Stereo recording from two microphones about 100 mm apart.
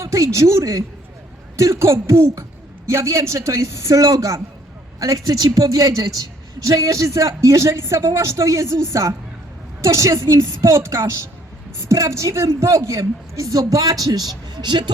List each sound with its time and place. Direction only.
0.0 s a man's voice: 30° right (ahead or behind); by 14.8 s 50° right (ahead or behind)